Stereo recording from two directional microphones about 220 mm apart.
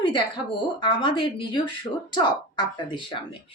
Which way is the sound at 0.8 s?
20° left (ahead or behind).